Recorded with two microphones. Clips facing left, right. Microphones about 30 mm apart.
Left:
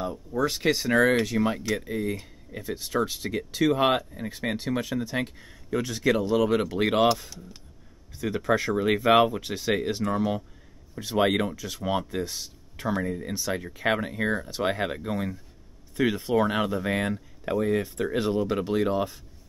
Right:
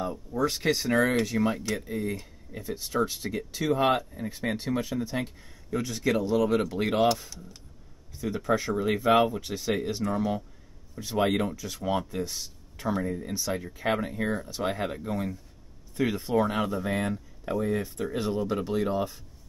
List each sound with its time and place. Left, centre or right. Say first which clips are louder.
0.0 s speech: left 1 dB; centre
8.2 s speech: left 2 dB; left
8.5 s speech: left 3 dB; left